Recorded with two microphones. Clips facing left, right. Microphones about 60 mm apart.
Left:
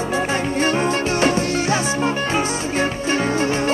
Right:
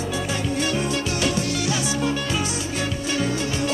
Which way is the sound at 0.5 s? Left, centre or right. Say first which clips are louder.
Left 5 dB; left.